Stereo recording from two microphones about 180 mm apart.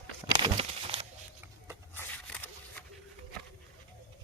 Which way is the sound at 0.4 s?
30° right (ahead or behind).